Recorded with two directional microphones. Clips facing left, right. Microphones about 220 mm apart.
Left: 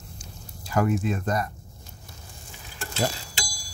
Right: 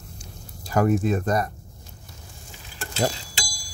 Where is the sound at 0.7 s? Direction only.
40° right (ahead or behind).